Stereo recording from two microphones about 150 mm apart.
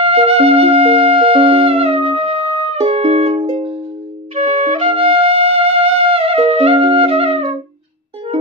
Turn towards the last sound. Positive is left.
turn(degrees=-40)  # may be behind; listen again after turning